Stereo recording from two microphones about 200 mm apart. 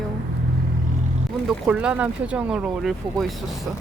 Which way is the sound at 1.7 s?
5° right (ahead or behind).